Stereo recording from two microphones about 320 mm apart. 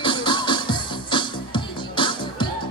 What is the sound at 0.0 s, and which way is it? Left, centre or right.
Music, centre.